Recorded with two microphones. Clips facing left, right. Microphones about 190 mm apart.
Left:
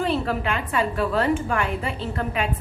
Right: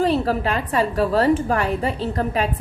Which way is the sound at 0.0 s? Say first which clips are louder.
Right 4 dB; 35° right (ahead or behind).